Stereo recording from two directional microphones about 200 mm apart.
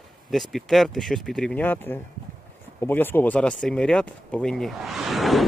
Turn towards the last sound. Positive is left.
turn(degrees=0)  # may be behind; listen again after turning